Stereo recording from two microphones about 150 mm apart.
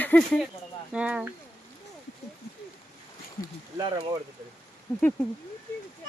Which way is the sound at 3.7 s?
30° right (ahead or behind).